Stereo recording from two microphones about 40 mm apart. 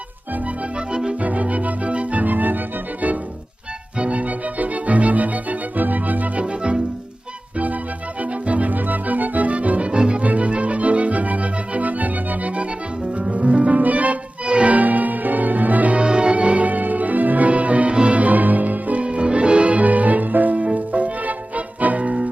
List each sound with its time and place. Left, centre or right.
0.7 s music: right
1.2 s music: right
4.0 s organ: right
6.4 s music: right
8.2 s music: right
14.4 s music: right
14.7 s music: right
16.0 s music: right
19.0 s music: right